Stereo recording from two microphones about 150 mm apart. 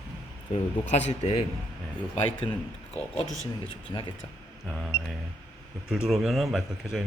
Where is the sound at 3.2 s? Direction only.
20° right (ahead or behind).